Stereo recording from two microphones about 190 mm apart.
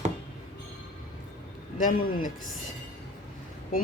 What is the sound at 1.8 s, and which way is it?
Speech, 45° left (ahead or behind).